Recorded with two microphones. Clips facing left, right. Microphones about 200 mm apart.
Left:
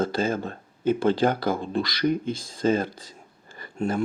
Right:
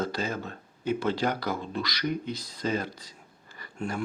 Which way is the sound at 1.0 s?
50° left (ahead or behind).